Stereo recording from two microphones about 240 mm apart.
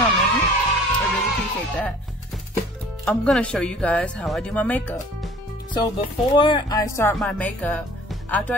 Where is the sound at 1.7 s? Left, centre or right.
Centre.